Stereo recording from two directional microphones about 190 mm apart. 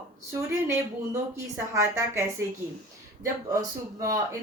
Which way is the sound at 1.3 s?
15° right (ahead or behind).